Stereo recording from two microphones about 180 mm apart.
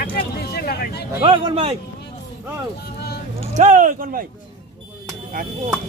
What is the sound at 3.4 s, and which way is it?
Speech, 40° right (ahead or behind).